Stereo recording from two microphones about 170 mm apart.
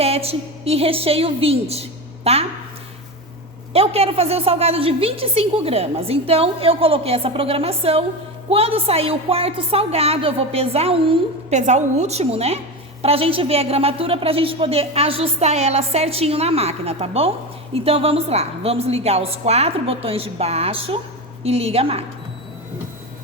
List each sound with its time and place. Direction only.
0.0 s a woman's voice: 35° right (ahead or behind)
3.7 s a woman's voice: 35° right (ahead or behind)
11.5 s a woman's voice: 45° right (ahead or behind)